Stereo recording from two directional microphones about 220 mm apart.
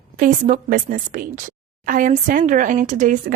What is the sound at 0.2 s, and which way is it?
A woman's voice, 35° right (ahead or behind).